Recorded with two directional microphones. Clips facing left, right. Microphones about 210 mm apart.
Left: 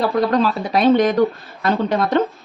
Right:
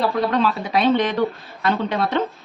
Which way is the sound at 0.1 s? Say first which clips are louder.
Left 3 dB; 40° left (ahead or behind).